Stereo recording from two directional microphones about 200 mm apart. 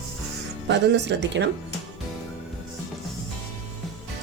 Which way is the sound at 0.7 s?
60° right (ahead or behind).